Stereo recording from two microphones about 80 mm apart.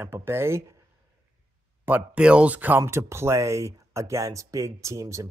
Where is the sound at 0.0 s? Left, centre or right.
Right.